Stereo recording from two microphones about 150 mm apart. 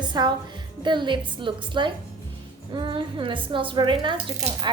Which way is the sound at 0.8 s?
30° right (ahead or behind).